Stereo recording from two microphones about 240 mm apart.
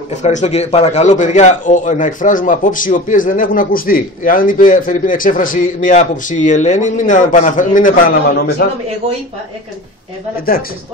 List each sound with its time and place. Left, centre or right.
0.1 s a man's voice: left